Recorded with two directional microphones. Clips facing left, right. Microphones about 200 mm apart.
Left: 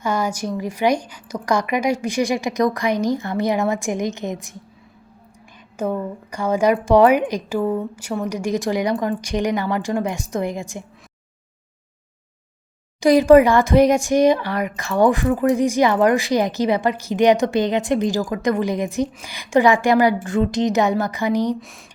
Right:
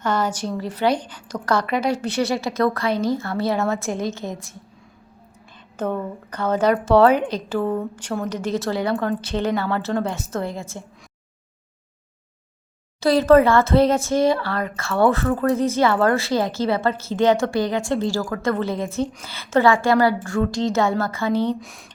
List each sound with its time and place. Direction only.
0.0 s speech: 10° left (ahead or behind)
5.7 s speech: 10° left (ahead or behind)
13.0 s speech: 15° left (ahead or behind)
21.6 s speech: centre (ahead or behind)